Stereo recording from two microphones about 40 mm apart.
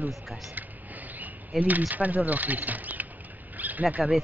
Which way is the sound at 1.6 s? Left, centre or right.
Right.